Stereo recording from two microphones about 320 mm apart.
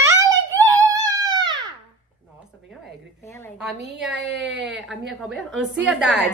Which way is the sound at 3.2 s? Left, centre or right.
Centre.